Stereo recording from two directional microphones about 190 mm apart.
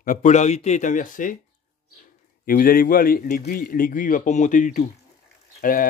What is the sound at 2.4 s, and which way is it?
A man's voice, 50° left (ahead or behind).